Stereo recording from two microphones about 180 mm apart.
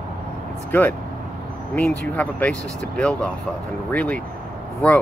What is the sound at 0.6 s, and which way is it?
Speech, 10° left (ahead or behind).